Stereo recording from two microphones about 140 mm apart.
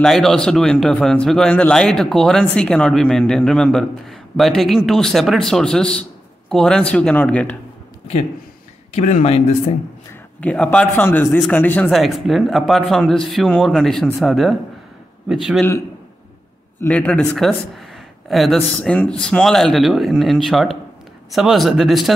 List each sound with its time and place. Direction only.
0.0 s a man's voice: centre (ahead or behind)
8.9 s speech: 55° left (ahead or behind)
10.4 s a man's voice: 10° left (ahead or behind)
11.9 s a man's voice: centre (ahead or behind)
16.8 s a man's voice: 15° left (ahead or behind)